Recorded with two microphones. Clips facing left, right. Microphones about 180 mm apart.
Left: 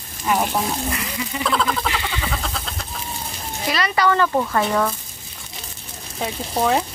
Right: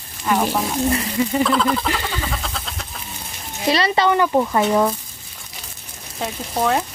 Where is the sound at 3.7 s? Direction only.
30° right (ahead or behind).